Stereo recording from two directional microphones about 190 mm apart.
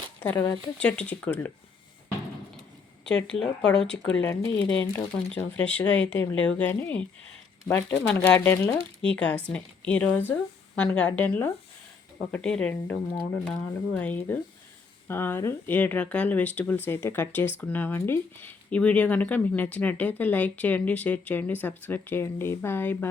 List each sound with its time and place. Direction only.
0.2 s speech: 15° left (ahead or behind)
0.8 s speech: 5° left (ahead or behind)
3.3 s speech: 5° left (ahead or behind)